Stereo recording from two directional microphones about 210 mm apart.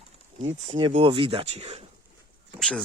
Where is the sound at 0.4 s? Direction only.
25° right (ahead or behind).